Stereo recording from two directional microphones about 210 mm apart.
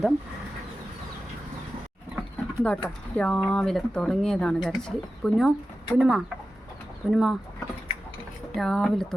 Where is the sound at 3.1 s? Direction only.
5° left (ahead or behind).